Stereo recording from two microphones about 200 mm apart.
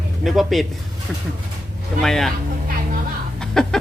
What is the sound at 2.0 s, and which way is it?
Speech, centre (ahead or behind).